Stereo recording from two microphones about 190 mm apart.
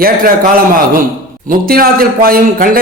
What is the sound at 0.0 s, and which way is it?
A man's voice, 50° right (ahead or behind).